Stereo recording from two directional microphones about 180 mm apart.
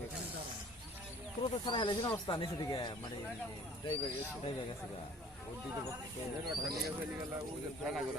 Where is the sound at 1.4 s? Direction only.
25° left (ahead or behind).